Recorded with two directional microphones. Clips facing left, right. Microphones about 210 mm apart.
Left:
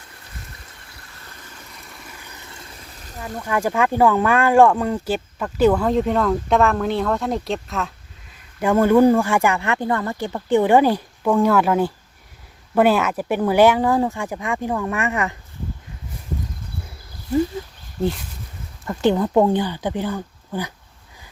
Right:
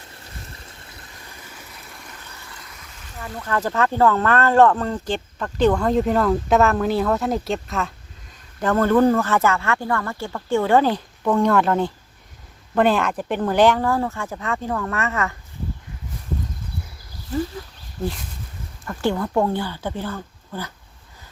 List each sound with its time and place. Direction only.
2.5 s a sound: 25° left (ahead or behind)
3.3 s speech: 10° left (ahead or behind)
8.6 s speech: 10° left (ahead or behind)
18.9 s speech: 20° left (ahead or behind)